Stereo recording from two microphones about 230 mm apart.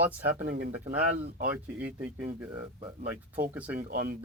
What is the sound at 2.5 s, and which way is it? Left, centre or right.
Speech, right.